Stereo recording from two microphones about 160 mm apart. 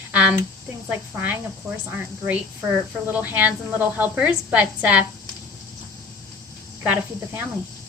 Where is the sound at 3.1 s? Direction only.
10° right (ahead or behind).